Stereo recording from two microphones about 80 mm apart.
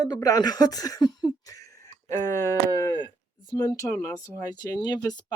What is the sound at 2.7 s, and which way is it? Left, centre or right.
Speech, left.